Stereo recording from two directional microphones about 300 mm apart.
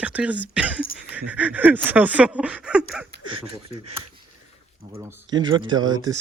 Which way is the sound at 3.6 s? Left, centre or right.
Right.